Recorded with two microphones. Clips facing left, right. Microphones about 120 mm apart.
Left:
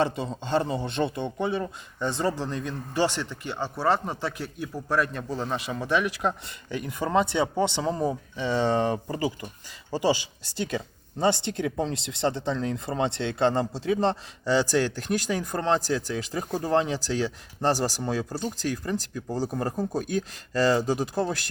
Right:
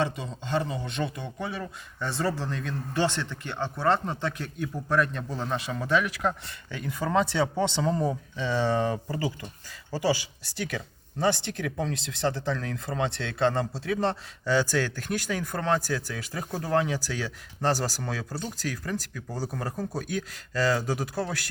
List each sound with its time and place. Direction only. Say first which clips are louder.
0.0 s a man's voice: left 3 dB; 30° left (ahead or behind)